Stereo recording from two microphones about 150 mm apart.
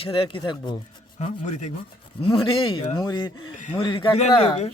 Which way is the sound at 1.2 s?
50° left (ahead or behind).